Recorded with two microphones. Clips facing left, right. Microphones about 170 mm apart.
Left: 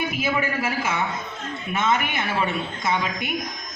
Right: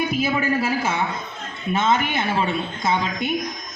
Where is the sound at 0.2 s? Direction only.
30° right (ahead or behind).